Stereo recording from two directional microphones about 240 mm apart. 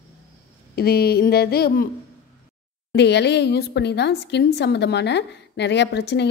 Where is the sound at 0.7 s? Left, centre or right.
Left.